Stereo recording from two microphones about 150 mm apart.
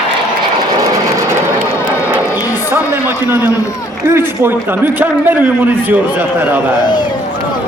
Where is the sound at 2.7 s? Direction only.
15° right (ahead or behind).